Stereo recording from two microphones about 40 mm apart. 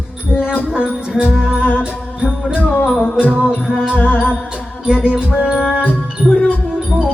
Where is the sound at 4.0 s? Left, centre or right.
Left.